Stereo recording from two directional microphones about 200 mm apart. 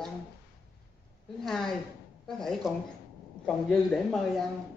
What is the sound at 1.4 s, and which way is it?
Speech, centre (ahead or behind).